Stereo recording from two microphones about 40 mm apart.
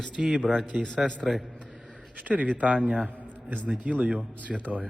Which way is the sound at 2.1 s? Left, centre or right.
Right.